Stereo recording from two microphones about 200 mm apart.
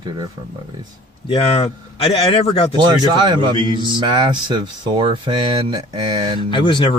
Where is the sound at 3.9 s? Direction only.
25° right (ahead or behind).